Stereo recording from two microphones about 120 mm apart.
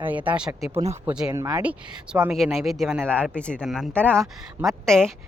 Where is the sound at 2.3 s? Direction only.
Centre (ahead or behind).